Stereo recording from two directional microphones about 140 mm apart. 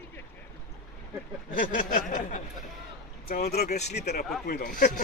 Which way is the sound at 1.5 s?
75° left (ahead or behind).